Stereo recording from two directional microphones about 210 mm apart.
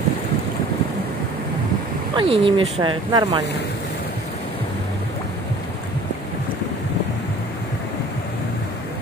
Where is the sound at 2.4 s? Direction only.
25° right (ahead or behind).